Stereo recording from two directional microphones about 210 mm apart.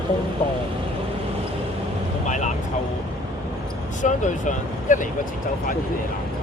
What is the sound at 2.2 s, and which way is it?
Speech, 35° left (ahead or behind).